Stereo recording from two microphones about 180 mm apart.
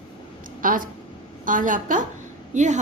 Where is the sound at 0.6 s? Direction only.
50° right (ahead or behind).